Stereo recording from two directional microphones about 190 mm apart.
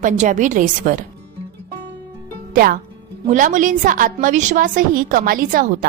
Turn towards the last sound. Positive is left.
turn(degrees=-45)  # may be behind; listen again after turning